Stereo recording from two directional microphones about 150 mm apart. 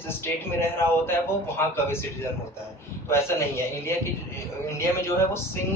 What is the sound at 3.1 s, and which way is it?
A man's voice, 15° left (ahead or behind).